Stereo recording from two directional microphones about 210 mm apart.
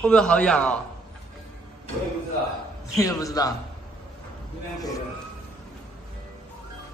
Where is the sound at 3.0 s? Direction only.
15° left (ahead or behind).